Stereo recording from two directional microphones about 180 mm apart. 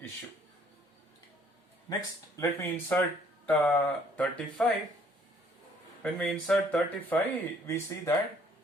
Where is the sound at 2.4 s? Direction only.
15° left (ahead or behind).